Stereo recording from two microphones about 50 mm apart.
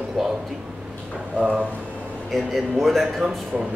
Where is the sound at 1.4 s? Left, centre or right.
Right.